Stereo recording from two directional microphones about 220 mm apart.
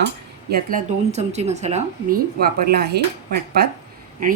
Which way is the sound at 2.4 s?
45° right (ahead or behind).